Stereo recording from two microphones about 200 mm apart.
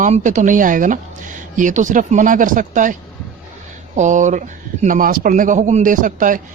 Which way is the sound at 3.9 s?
40° right (ahead or behind).